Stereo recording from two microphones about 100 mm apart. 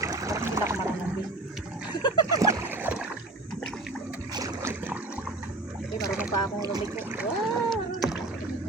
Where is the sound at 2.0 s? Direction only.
45° left (ahead or behind).